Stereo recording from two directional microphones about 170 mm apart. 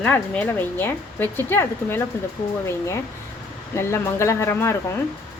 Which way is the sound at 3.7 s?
15° left (ahead or behind).